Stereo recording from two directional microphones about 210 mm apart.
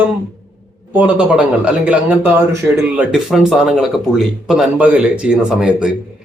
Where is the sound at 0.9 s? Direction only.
5° right (ahead or behind).